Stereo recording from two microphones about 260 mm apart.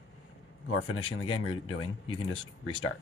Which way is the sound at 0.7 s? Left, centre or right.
Left.